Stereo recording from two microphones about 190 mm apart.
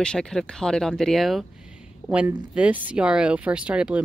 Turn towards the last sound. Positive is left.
turn(degrees=-5)  # may be behind; listen again after turning